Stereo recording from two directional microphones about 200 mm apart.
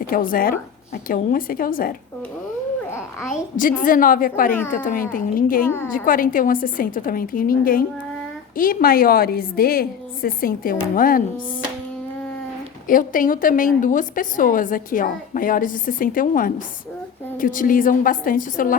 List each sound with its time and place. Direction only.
0.1 s a woman's voice: 45° left (ahead or behind)
3.6 s a woman's voice: 45° left (ahead or behind)
5.6 s a woman's voice: 10° left (ahead or behind)
5.9 s a woman's voice: 45° left (ahead or behind)
12.9 s a woman's voice: 45° left (ahead or behind)